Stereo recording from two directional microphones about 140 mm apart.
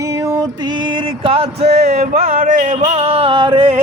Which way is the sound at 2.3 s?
70° right (ahead or behind).